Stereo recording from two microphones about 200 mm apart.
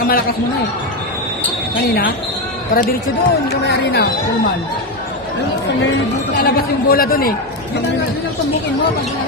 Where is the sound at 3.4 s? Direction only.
55° left (ahead or behind).